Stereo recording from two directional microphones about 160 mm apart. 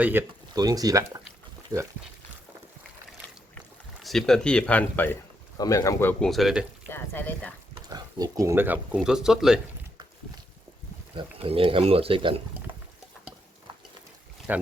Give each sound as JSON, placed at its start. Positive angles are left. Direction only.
{"t": 0.0, "sound": "speech", "side_deg": -10}
{"t": 0.5, "sound": "speech", "side_deg": -25}
{"t": 4.0, "sound": "speech", "side_deg": 0}
{"t": 5.5, "sound": "speech", "side_deg": 20}
{"t": 6.9, "sound": "speech", "side_deg": 15}
{"t": 7.8, "sound": "speech", "side_deg": -25}
{"t": 11.1, "sound": "speech", "side_deg": -35}
{"t": 14.5, "sound": "speech", "side_deg": -10}